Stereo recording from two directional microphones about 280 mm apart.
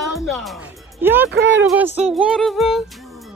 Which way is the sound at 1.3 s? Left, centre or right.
Right.